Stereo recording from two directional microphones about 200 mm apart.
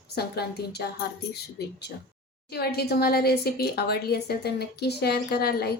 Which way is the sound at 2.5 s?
50° left (ahead or behind).